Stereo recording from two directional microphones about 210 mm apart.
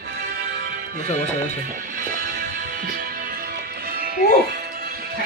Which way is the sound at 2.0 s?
40° right (ahead or behind).